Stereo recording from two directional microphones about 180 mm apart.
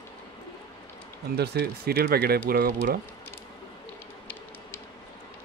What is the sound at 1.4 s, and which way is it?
Speech, 60° right (ahead or behind).